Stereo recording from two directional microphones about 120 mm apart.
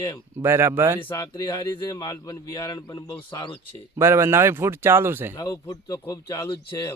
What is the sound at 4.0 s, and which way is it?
Speech, 20° right (ahead or behind).